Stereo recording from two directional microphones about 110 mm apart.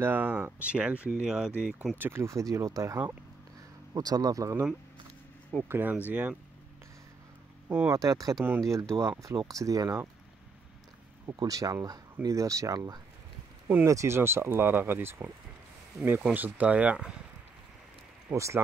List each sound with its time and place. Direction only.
0.0 s speech: 15° right (ahead or behind)
2.0 s speech: 20° right (ahead or behind)
5.7 s speech: 15° right (ahead or behind)
7.6 s speech: 25° right (ahead or behind)
11.2 s speech: 35° right (ahead or behind); by 17.1 s 10° right (ahead or behind)
18.3 s speech: 25° right (ahead or behind)